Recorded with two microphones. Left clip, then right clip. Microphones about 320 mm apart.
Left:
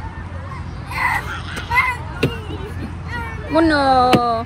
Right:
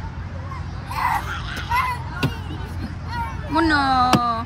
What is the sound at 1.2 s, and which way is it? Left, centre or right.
Baby cry, right.